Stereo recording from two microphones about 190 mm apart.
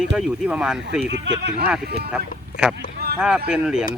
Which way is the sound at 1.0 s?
70° right (ahead or behind).